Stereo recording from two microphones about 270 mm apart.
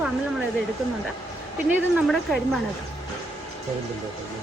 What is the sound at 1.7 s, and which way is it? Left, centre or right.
Speech, centre.